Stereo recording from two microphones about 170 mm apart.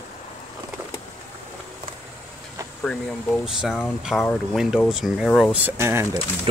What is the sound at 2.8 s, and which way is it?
Speech, 5° left (ahead or behind).